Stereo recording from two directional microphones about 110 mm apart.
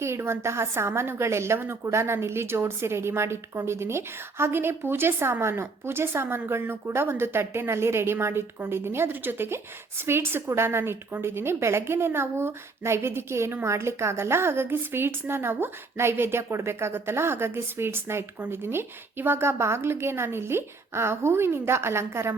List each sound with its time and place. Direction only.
0.0 s a woman's voice: 25° right (ahead or behind)